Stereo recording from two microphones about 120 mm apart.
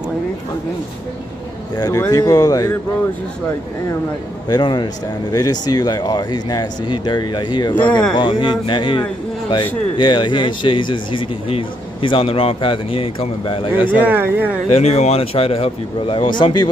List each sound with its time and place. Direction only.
1.8 s speech: 30° left (ahead or behind)
4.5 s speech: 35° left (ahead or behind)
7.7 s speech: 10° left (ahead or behind)
8.1 s speech: 40° left (ahead or behind)
14.0 s speech: 15° right (ahead or behind)
14.7 s speech: 65° left (ahead or behind); by 16.6 s 40° left (ahead or behind)